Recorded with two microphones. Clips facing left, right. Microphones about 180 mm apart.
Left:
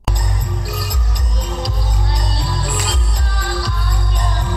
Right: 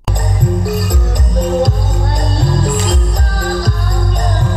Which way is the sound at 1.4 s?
50° right (ahead or behind).